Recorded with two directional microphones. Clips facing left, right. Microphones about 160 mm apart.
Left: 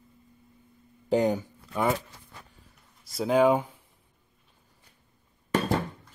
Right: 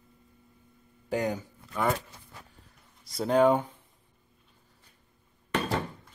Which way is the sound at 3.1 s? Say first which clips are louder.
Left 1 dB; 5° left (ahead or behind).